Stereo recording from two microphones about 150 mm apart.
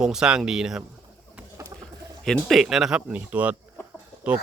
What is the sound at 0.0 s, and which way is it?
Speech, 5° right (ahead or behind).